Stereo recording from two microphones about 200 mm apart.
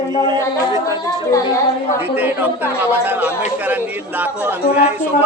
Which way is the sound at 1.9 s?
10° right (ahead or behind).